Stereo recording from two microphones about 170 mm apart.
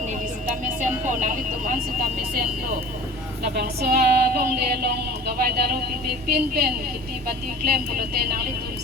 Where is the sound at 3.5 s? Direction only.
70° right (ahead or behind).